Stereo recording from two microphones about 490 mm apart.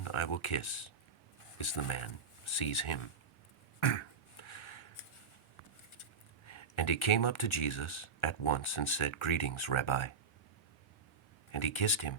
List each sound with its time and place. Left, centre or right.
0.0 s speech: left
3.8 s a sound: left
6.0 s speech: left
11.5 s speech: left